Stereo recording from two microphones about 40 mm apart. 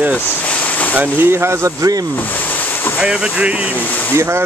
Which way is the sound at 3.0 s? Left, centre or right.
Right.